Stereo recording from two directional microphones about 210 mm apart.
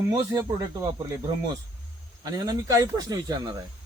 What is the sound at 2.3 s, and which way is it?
Speech, 15° right (ahead or behind).